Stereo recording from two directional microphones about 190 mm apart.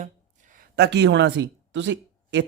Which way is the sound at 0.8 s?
65° right (ahead or behind).